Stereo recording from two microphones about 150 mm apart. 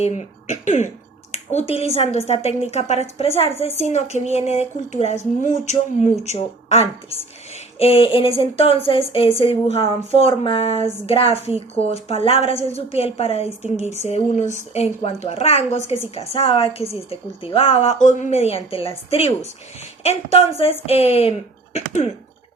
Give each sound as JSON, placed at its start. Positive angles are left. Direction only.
{"t": 0.0, "sound": "speech", "side_deg": 50}
{"t": 1.5, "sound": "a woman's voice", "side_deg": 45}